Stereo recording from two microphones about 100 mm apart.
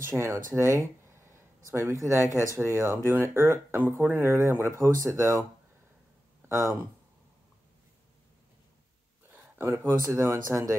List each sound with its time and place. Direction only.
0.1 s speech: 30° right (ahead or behind)
6.4 s a sound: 25° right (ahead or behind)
9.3 s speech: 25° right (ahead or behind)